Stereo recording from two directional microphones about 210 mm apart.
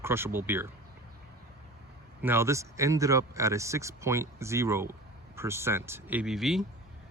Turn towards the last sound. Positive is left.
turn(degrees=0)  # may be behind; listen again after turning